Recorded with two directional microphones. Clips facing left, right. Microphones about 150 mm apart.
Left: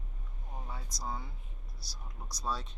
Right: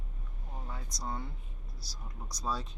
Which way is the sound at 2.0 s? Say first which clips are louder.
Right 1 dB; centre (ahead or behind).